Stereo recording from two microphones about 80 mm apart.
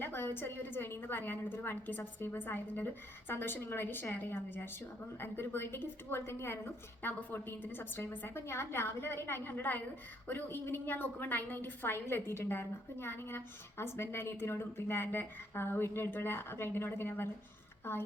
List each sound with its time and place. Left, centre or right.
0.0 s a woman's voice: left